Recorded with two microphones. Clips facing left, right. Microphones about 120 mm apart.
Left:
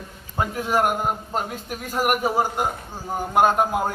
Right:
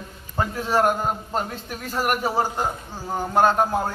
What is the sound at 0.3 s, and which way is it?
A man's voice, 10° left (ahead or behind).